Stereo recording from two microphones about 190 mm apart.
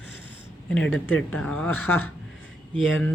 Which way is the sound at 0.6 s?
5° left (ahead or behind).